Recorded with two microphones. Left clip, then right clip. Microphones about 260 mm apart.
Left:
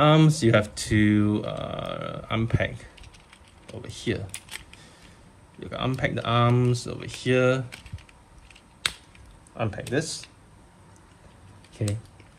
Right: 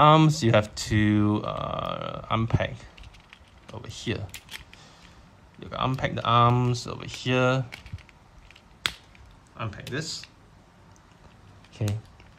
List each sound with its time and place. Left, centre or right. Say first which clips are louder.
0.0 s speech: right 2 dB; centre
5.6 s speech: even; centre
8.8 s finger snapping: left 1 dB; centre
9.6 s speech: left 6 dB; centre
11.7 s typing: left 2 dB; centre